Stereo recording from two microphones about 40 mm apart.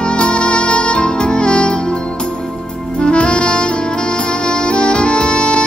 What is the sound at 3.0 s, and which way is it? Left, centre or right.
Saxophone, left.